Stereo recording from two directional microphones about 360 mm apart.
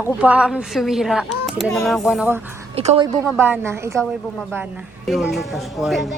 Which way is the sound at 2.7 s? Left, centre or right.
Centre.